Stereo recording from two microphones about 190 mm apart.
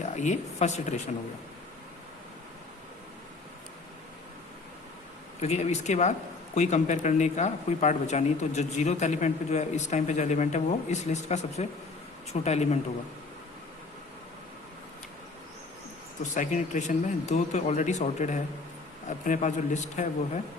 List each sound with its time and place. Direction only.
0.2 s speech: 40° left (ahead or behind)
5.4 s speech: 35° left (ahead or behind)
16.3 s speech: 40° left (ahead or behind)